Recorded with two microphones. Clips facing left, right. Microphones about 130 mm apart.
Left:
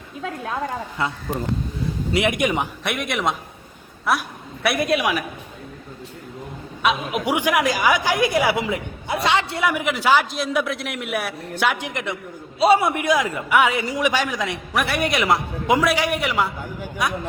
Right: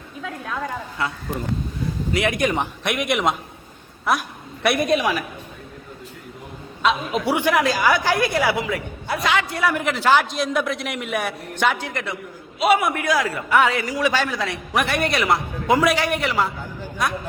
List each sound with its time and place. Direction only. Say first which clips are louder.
0.2 s a man's voice: left 2 dB; 25° left (ahead or behind)
2.1 s a man's voice: left 1 dB; 20° left (ahead or behind)
2.5 s a man's voice: even; 5° left (ahead or behind)
4.6 s a man's voice: right 1 dB; centre (ahead or behind)
6.8 s a woman's voice: right 1 dB; 15° left (ahead or behind)
9.6 s a woman's voice: right 1 dB; 10° left (ahead or behind)
12.5 s a man's voice: left 2 dB; 30° left (ahead or behind)
14.8 s a woman's voice: even; 5° left (ahead or behind)
15.2 s a man's voice: left 1 dB; 20° left (ahead or behind)